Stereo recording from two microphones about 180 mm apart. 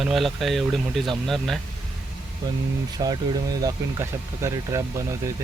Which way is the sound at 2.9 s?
20° right (ahead or behind).